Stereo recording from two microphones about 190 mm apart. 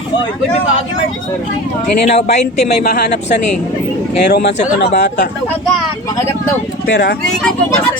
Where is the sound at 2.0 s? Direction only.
35° left (ahead or behind).